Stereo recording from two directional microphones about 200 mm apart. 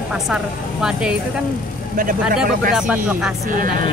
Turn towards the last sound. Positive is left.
turn(degrees=-5)  # may be behind; listen again after turning